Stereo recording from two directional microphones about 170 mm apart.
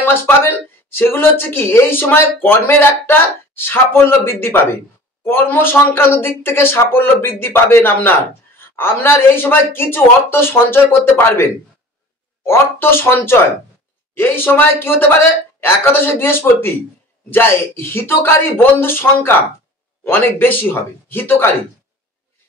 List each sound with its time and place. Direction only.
0.0 s speech: 10° left (ahead or behind)